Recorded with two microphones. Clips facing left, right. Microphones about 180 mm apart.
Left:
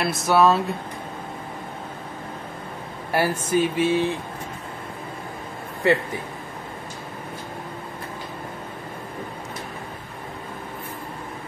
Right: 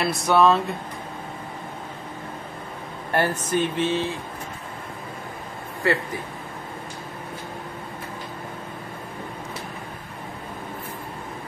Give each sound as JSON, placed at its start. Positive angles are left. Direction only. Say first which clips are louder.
{"t": 0.0, "sound": "speech", "louder": "even", "side_deg": 0}
{"t": 3.1, "sound": "speech", "louder": "left 1 dB", "side_deg": 10}
{"t": 5.8, "sound": "speech", "louder": "left 3 dB", "side_deg": 20}